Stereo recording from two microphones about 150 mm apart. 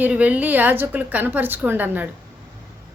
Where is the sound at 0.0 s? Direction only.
10° right (ahead or behind).